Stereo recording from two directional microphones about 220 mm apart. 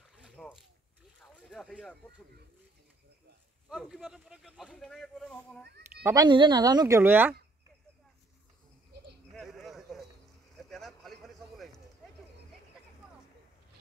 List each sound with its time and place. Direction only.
0.2 s boat: centre (ahead or behind)
1.2 s vehicle: centre (ahead or behind)
3.6 s speech: centre (ahead or behind)
6.0 s speech: 20° right (ahead or behind)
9.3 s a sound: centre (ahead or behind)